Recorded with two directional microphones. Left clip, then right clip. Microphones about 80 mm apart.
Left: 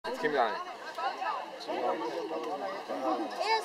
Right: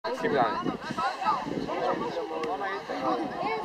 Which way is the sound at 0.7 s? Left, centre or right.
Centre.